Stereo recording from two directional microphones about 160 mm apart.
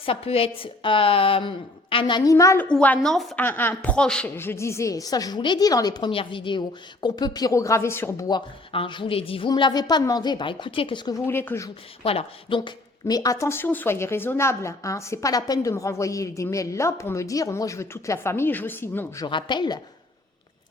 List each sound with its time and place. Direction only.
0.0 s speech: 35° left (ahead or behind); by 2.6 s 20° left (ahead or behind)
2.6 s a woman's voice: 10° left (ahead or behind)
3.4 s a woman's voice: 10° left (ahead or behind)
8.3 s a woman's voice: 30° left (ahead or behind)
11.3 s speech: 15° left (ahead or behind)
12.0 s a woman's voice: 35° left (ahead or behind)